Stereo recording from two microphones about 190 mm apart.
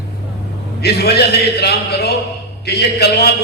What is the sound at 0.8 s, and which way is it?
A man's voice, 60° left (ahead or behind).